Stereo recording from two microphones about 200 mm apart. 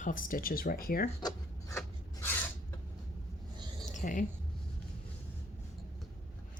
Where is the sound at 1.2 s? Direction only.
15° left (ahead or behind).